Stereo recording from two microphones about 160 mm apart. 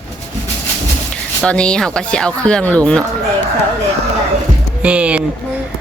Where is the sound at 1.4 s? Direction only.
5° left (ahead or behind).